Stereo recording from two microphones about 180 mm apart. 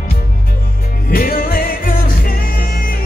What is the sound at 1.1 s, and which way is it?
Music, 55° left (ahead or behind).